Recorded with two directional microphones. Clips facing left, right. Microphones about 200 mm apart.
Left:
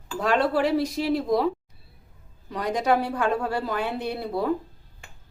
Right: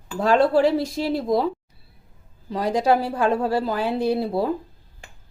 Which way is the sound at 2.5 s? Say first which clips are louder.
Right 3 dB; 30° right (ahead or behind).